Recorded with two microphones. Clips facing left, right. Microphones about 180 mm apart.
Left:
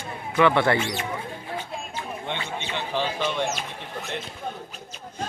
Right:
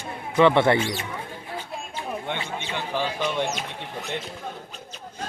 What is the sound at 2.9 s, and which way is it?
Bird, 15° right (ahead or behind).